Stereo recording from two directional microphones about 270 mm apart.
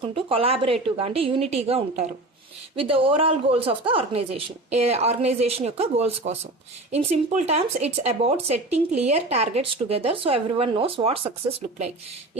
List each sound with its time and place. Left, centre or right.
0.0 s speech: centre